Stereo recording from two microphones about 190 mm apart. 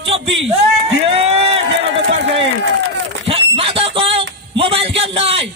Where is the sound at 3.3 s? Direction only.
30° right (ahead or behind).